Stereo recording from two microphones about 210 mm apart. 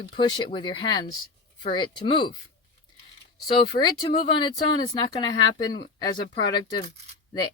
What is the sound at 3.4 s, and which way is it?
Speech, 20° left (ahead or behind).